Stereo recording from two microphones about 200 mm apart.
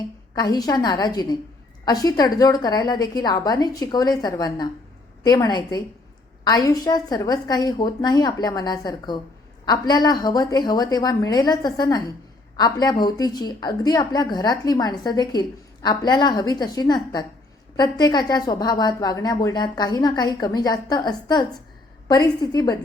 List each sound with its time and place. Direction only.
0.3 s a woman's voice: 20° left (ahead or behind)